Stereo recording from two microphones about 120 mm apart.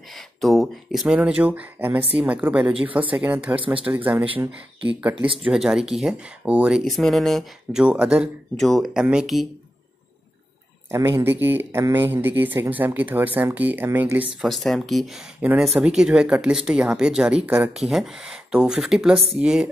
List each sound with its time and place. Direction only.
0.1 s speech: centre (ahead or behind)
7.8 s speech: 10° right (ahead or behind)
10.9 s speech: 25° right (ahead or behind)
14.4 s speech: centre (ahead or behind)